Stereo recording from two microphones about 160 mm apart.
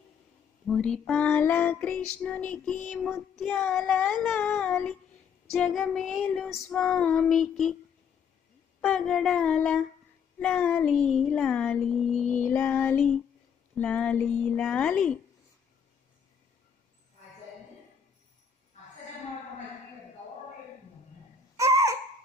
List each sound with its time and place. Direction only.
0.7 s music: 5° left (ahead or behind)
2.1 s female singing: 5° left (ahead or behind)
4.2 s music: 10° left (ahead or behind)
5.6 s female singing: 5° left (ahead or behind)
8.8 s female singing: 5° left (ahead or behind)
10.4 s music: 5° left (ahead or behind)
21.5 s a sound: 20° right (ahead or behind)